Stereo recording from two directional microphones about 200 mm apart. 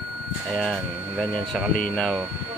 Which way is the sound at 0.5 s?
Centre (ahead or behind).